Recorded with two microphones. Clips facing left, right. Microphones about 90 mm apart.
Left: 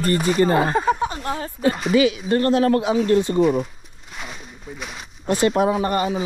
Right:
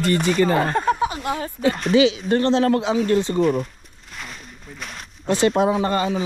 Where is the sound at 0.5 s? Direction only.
5° left (ahead or behind).